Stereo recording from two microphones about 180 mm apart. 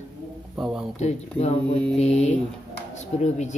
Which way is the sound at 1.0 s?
40° left (ahead or behind).